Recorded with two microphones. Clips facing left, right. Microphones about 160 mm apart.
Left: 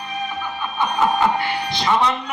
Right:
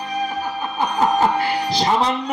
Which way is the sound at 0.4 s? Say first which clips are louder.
Right 1 dB; 35° right (ahead or behind).